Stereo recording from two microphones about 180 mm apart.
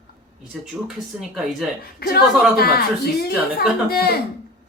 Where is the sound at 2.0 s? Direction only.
60° left (ahead or behind).